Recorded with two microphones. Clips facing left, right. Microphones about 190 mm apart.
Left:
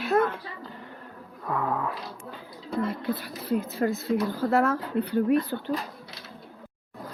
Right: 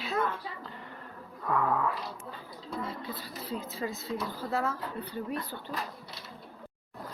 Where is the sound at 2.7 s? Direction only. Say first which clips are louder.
Left 9 dB; 65° left (ahead or behind).